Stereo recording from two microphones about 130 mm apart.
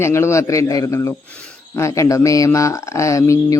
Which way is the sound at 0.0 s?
20° left (ahead or behind).